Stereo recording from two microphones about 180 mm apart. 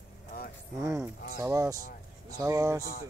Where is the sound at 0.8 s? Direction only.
15° right (ahead or behind).